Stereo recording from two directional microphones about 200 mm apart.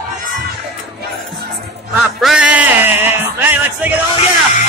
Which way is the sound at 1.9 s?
5° right (ahead or behind).